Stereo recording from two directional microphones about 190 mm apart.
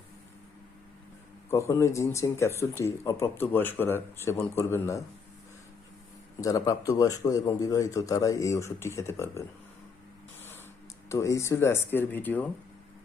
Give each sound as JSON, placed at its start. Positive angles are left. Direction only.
{"t": 1.5, "sound": "speech", "side_deg": 15}
{"t": 6.4, "sound": "speech", "side_deg": 15}
{"t": 11.1, "sound": "speech", "side_deg": 15}